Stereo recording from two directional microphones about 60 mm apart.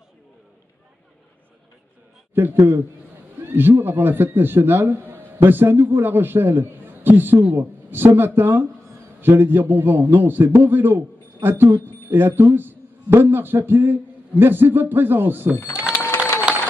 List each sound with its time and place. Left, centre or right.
2.3 s a man's voice: right